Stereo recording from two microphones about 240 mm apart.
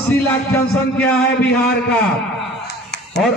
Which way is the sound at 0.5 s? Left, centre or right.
Centre.